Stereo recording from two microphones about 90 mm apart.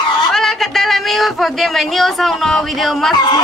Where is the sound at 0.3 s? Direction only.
5° left (ahead or behind).